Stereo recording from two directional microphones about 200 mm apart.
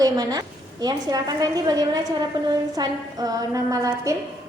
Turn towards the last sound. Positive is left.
turn(degrees=-15)  # may be behind; listen again after turning